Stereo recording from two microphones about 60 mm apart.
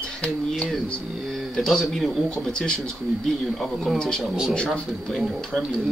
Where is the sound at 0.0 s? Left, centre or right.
Centre.